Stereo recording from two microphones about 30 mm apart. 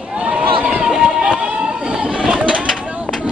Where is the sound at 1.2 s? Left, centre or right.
Right.